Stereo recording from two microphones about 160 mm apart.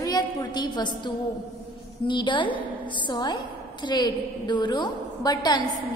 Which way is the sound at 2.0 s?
30° left (ahead or behind).